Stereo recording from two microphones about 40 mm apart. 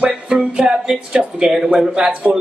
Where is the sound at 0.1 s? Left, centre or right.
Right.